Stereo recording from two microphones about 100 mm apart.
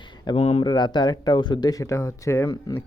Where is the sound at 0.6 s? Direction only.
45° left (ahead or behind).